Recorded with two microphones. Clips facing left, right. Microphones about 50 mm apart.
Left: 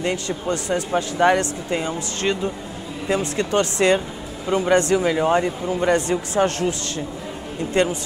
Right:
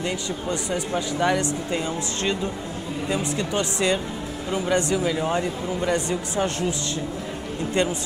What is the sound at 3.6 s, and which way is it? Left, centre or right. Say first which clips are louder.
Speech: left 6 dB; left.